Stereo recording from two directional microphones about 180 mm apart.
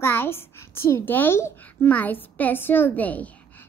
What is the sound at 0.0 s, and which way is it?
A woman's voice, 10° left (ahead or behind).